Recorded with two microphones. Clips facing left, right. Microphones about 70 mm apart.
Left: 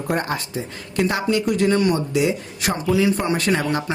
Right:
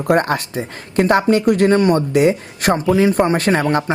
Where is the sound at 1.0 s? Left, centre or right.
Right.